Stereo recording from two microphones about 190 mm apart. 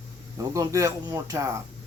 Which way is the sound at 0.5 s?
15° right (ahead or behind).